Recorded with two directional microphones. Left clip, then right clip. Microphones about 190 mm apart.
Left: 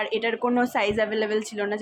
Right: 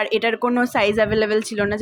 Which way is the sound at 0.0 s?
20° right (ahead or behind).